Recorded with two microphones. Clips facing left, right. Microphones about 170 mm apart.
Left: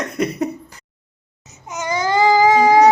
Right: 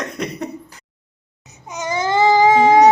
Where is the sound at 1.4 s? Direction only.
15° right (ahead or behind).